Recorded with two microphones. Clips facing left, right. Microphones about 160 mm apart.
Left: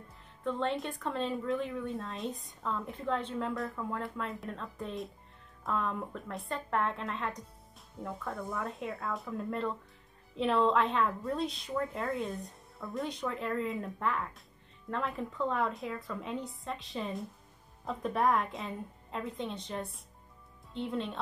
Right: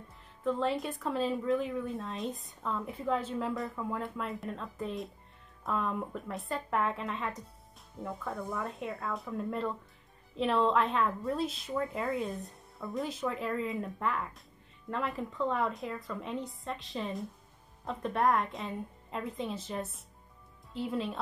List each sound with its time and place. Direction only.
0.4 s speech: 5° right (ahead or behind)